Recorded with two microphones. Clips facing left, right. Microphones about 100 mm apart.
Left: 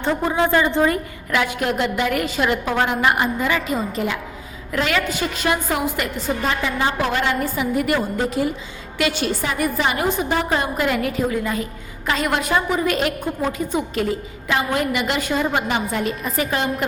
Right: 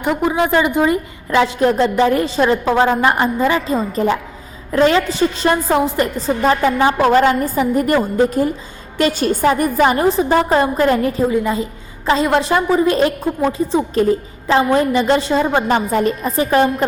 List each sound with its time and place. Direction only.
0.0 s a woman's voice: 15° right (ahead or behind); by 11.1 s 35° right (ahead or behind)
11.3 s a woman's voice: 20° right (ahead or behind)
15.7 s a woman's voice: 40° right (ahead or behind)